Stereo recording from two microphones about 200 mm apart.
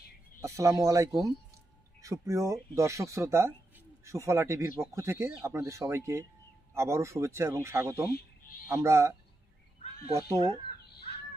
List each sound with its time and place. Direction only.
0.4 s speech: 15° right (ahead or behind)
8.1 s a sound: 45° left (ahead or behind)
8.6 s speech: 15° right (ahead or behind)
10.1 s speech: 15° right (ahead or behind)